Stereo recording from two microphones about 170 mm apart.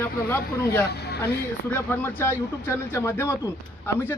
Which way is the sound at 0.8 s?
75° left (ahead or behind).